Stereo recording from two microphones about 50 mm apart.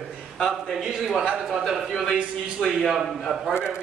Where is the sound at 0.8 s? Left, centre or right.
Centre.